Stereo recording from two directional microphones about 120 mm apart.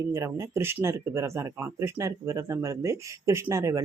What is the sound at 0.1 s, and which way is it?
Speech, 25° right (ahead or behind).